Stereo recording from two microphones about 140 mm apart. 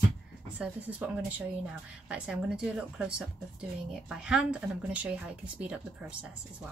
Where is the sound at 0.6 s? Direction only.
10° right (ahead or behind).